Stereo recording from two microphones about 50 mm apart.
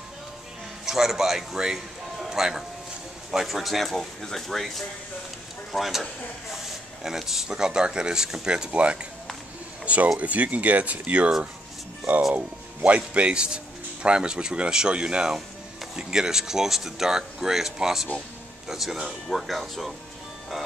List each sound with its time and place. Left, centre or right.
0.8 s speech: centre
2.1 s music: centre
3.3 s speech: centre; by 9.0 s right
10.1 s speech: right
12.4 s speech: right; by 19.9 s centre